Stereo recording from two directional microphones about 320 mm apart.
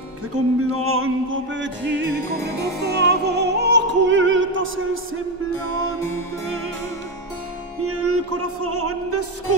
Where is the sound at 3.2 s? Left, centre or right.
Right.